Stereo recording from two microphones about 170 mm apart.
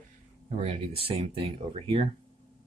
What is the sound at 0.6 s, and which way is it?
Speech, 35° right (ahead or behind).